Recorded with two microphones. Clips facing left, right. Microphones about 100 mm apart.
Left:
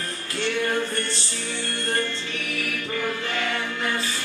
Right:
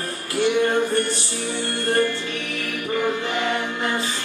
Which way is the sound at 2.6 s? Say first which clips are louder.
Right 5 dB; 20° right (ahead or behind).